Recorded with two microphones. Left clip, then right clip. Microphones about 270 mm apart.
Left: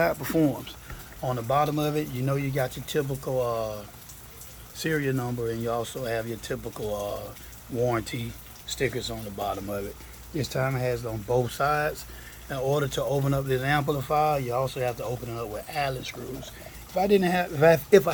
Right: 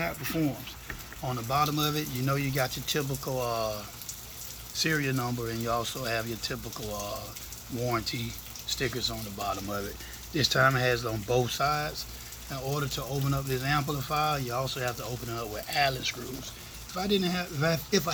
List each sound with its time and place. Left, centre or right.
0.0 s speech: centre